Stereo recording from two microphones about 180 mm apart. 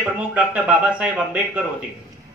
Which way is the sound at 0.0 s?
5° right (ahead or behind).